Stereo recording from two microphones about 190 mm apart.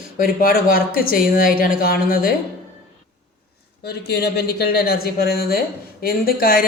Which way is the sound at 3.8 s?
60° left (ahead or behind).